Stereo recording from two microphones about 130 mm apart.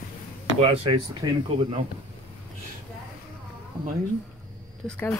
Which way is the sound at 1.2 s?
25° right (ahead or behind).